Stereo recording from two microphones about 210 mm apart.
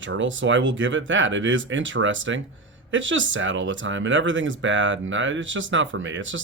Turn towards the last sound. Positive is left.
turn(degrees=-65)  # may be behind; listen again after turning